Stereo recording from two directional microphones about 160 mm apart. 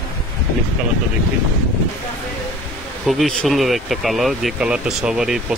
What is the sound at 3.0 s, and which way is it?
Speech, centre (ahead or behind).